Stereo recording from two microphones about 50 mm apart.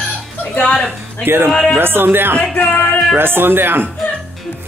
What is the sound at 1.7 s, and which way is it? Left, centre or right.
Speech, right.